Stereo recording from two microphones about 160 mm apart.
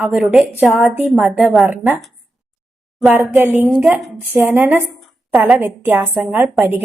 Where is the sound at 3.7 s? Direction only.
Centre (ahead or behind).